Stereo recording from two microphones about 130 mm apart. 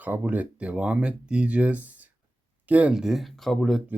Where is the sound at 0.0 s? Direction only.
15° right (ahead or behind).